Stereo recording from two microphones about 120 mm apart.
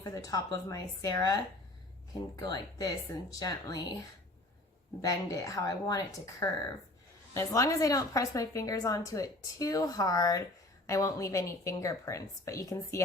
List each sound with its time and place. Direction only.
0.0 s a woman's voice: 30° left (ahead or behind)
5.0 s a woman's voice: 30° left (ahead or behind)